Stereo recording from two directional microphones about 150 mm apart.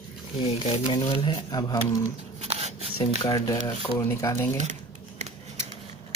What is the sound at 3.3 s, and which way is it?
Speech, 25° left (ahead or behind).